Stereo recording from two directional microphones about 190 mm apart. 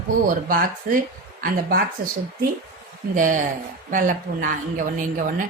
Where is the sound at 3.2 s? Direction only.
45° right (ahead or behind).